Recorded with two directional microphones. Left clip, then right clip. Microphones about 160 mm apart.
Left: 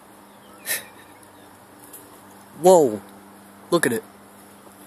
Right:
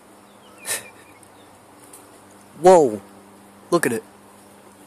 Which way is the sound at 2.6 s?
10° right (ahead or behind).